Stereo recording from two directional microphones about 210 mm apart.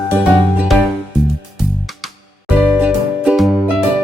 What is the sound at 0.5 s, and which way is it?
Music, 5° right (ahead or behind).